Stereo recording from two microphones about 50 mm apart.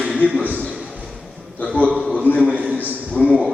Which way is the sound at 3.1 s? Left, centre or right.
Left.